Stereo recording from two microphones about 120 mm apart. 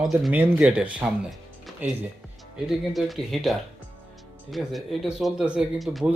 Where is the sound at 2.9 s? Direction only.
Centre (ahead or behind).